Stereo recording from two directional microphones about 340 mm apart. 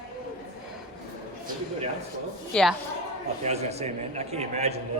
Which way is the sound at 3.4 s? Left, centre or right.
Centre.